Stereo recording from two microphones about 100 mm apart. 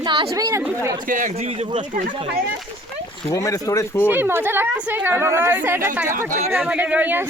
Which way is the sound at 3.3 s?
35° left (ahead or behind).